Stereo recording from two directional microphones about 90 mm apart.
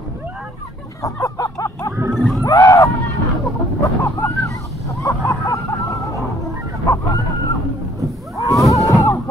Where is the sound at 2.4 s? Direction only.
35° left (ahead or behind).